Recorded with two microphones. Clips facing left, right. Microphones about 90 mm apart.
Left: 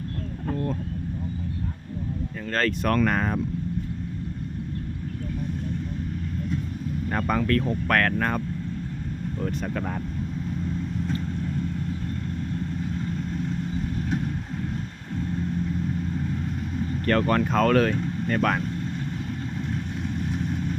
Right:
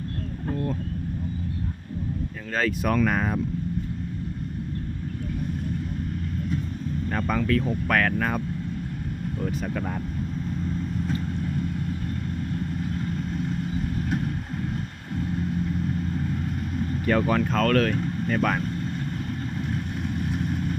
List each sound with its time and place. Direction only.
2.4 s speech: 5° right (ahead or behind)
7.1 s speech: 5° left (ahead or behind)
9.4 s speech: centre (ahead or behind)
13.1 s vehicle: 5° right (ahead or behind)
16.7 s speech: 5° right (ahead or behind)
20.0 s vehicle: 5° right (ahead or behind)